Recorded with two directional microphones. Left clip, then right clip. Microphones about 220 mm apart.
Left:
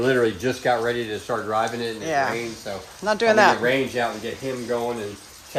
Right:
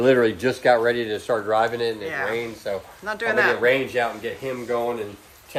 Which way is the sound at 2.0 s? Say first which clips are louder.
Left 3 dB; 15° left (ahead or behind).